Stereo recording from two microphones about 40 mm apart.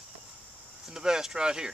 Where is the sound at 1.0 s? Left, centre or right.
Centre.